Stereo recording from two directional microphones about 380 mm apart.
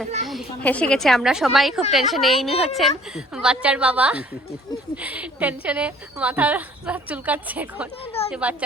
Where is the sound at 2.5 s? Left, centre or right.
Centre.